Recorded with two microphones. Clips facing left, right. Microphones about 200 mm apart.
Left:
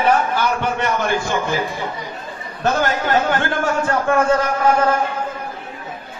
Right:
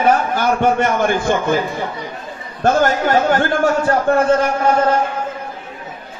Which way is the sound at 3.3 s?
40° right (ahead or behind).